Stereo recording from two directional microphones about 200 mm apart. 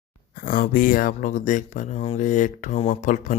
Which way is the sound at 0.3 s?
45° left (ahead or behind).